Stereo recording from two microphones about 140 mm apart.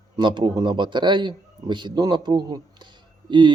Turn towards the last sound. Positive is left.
turn(degrees=-35)  # may be behind; listen again after turning